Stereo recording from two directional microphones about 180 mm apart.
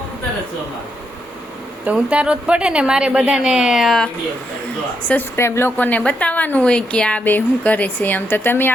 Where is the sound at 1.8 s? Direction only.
5° right (ahead or behind).